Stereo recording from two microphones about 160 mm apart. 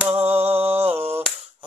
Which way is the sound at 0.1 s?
40° right (ahead or behind).